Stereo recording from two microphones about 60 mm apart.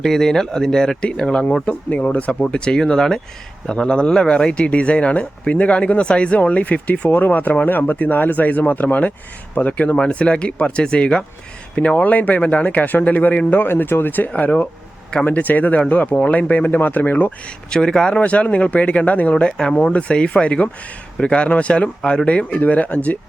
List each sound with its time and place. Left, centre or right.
0.0 s speech: centre; by 17.3 s left
17.7 s speech: centre
18.2 s speech: left
19.3 s speech: centre